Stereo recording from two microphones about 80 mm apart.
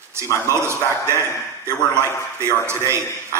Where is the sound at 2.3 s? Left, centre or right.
Right.